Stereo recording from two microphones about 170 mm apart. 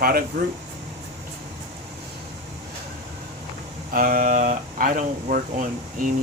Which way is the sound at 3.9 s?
55° right (ahead or behind).